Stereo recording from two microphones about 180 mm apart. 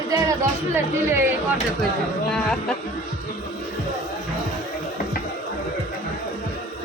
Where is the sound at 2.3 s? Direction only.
5° left (ahead or behind).